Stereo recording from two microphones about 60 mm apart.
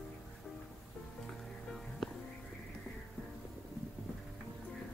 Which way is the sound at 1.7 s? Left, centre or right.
Centre.